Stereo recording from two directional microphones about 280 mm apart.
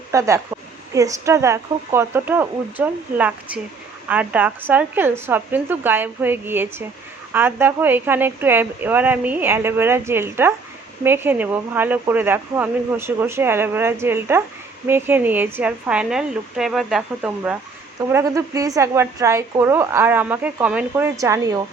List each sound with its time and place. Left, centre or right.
0.1 s a woman's voice: centre